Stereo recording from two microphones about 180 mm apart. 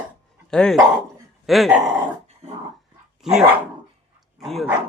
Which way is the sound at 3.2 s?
Centre (ahead or behind).